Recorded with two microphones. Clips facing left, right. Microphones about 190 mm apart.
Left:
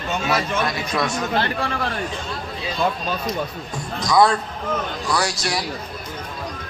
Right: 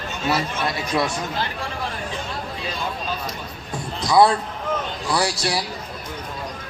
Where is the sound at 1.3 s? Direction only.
70° left (ahead or behind).